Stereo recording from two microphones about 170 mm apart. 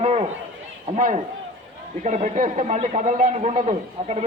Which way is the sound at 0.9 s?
45° right (ahead or behind).